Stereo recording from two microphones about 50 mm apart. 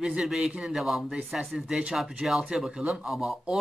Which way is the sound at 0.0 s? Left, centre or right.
Centre.